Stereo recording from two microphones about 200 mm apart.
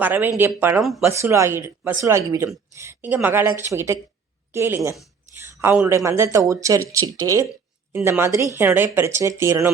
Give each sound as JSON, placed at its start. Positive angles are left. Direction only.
{"t": 0.0, "sound": "speech", "side_deg": -10}
{"t": 1.1, "sound": "speech", "side_deg": -15}